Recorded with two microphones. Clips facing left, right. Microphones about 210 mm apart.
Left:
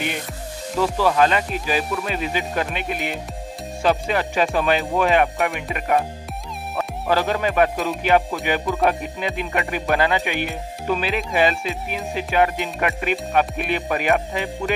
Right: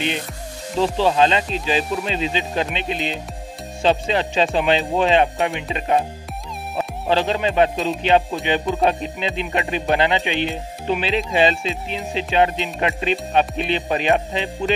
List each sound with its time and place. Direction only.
0.7 s music: 25° right (ahead or behind)